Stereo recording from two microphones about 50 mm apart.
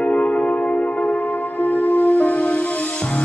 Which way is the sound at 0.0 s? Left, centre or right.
Left.